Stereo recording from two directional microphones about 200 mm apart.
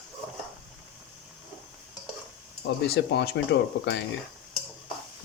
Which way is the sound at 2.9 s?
55° left (ahead or behind).